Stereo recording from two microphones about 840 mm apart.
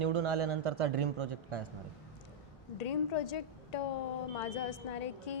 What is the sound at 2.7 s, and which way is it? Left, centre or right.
A woman's voice, left.